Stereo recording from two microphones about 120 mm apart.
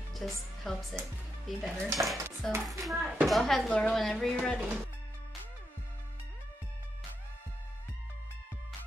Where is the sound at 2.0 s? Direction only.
20° right (ahead or behind).